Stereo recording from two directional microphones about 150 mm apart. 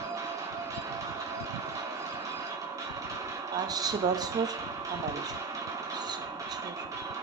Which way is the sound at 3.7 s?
25° right (ahead or behind).